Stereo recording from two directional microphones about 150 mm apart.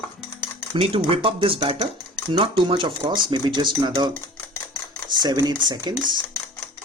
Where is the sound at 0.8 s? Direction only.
35° right (ahead or behind).